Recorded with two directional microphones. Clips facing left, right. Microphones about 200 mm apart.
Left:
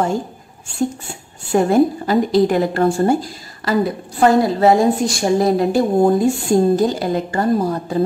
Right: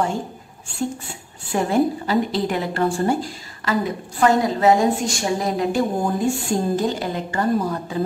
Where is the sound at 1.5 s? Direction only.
45° left (ahead or behind).